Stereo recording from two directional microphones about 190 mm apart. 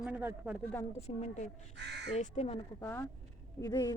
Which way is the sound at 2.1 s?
35° left (ahead or behind).